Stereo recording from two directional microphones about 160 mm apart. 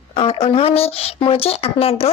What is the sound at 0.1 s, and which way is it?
Speech, 35° left (ahead or behind).